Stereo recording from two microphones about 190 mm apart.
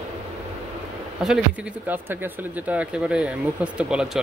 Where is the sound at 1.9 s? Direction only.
10° right (ahead or behind).